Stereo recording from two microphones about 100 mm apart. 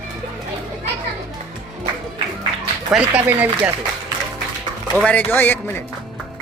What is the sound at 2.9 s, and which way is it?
Speech, 10° right (ahead or behind).